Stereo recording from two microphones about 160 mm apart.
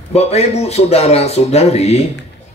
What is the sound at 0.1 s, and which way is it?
Speech, 40° left (ahead or behind).